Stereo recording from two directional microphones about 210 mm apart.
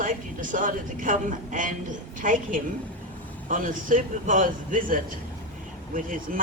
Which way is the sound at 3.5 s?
40° right (ahead or behind).